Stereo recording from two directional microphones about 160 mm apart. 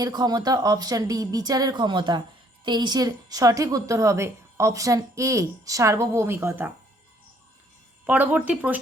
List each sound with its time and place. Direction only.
0.0 s a woman's voice: 25° right (ahead or behind)
8.0 s speech: 10° right (ahead or behind)